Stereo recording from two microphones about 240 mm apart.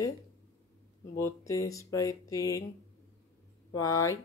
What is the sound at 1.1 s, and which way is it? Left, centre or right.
Speech, centre.